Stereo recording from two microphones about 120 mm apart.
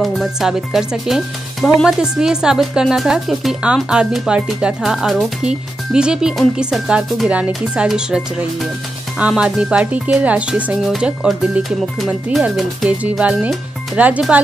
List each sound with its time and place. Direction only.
0.0 s speech: centre (ahead or behind)